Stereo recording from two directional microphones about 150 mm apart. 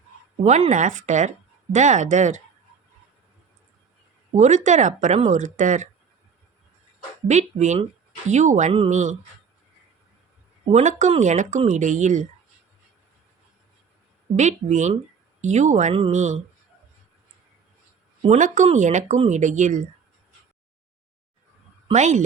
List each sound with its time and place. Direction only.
0.4 s speech: 50° right (ahead or behind)
4.4 s speech: 55° right (ahead or behind)
7.3 s speech: 50° right (ahead or behind)
10.7 s speech: 50° right (ahead or behind)
14.3 s speech: 55° right (ahead or behind)
18.2 s speech: 55° right (ahead or behind)
21.9 s speech: 55° right (ahead or behind)